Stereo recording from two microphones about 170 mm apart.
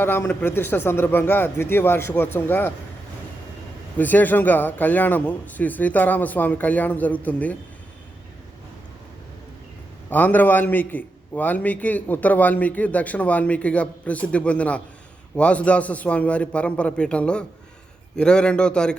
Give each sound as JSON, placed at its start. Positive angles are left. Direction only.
{"t": 0.0, "sound": "a man's voice", "side_deg": 10}
{"t": 3.9, "sound": "a man's voice", "side_deg": 10}
{"t": 10.1, "sound": "a man's voice", "side_deg": 10}